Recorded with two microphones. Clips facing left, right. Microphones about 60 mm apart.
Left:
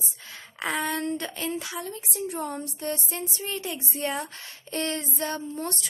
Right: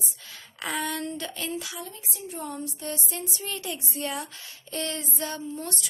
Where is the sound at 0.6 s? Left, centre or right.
Left.